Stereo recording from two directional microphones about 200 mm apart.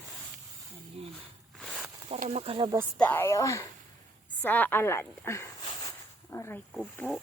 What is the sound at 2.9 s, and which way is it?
Speech, 10° left (ahead or behind).